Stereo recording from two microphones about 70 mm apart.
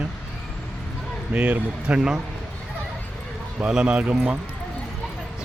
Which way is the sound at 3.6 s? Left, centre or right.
Centre.